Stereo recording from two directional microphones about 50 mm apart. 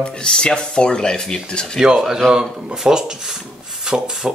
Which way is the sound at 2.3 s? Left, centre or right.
Centre.